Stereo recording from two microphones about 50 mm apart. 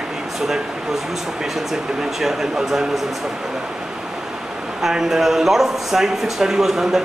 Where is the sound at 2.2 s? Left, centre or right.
Centre.